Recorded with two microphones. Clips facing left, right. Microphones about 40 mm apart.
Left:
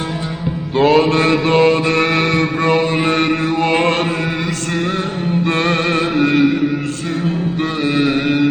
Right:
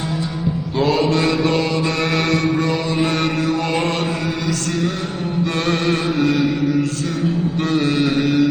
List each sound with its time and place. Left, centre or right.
0.8 s mantra: left
5.5 s music: left
7.6 s mantra: left